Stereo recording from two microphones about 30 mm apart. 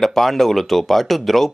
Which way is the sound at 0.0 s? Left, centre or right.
Centre.